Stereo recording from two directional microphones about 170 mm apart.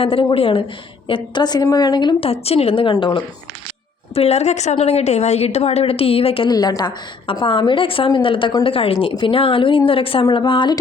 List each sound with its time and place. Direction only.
0.0 s a woman's voice: 30° left (ahead or behind)